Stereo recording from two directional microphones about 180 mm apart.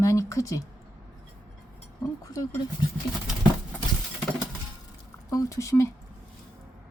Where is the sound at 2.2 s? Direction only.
20° left (ahead or behind).